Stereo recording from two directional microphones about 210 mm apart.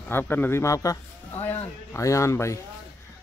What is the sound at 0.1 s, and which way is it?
Speech, 10° left (ahead or behind).